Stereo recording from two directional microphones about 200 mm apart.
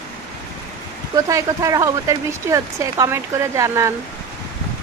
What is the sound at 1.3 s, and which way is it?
Speech, 15° right (ahead or behind).